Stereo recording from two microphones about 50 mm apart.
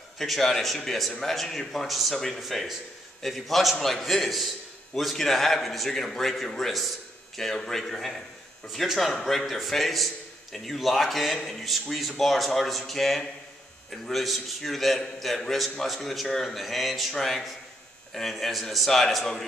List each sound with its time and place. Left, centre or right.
0.2 s speech: centre